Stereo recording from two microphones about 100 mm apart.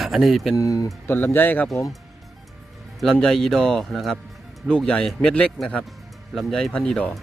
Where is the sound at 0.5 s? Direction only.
35° left (ahead or behind).